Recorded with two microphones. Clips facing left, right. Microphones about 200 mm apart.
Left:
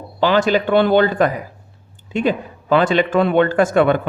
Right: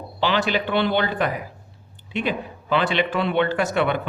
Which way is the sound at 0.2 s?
45° left (ahead or behind).